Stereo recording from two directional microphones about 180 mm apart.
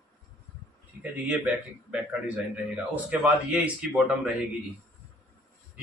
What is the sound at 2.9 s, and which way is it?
Speech, 10° right (ahead or behind).